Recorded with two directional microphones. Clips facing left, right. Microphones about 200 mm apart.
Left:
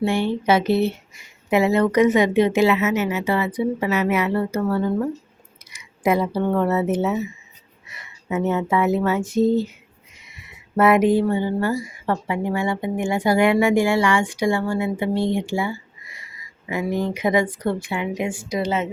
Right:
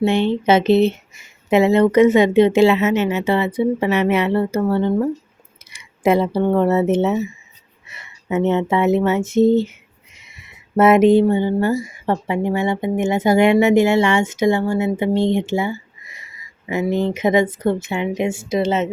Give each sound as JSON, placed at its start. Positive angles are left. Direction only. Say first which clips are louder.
{"t": 0.0, "sound": "speech", "louder": "right 4 dB", "side_deg": -25}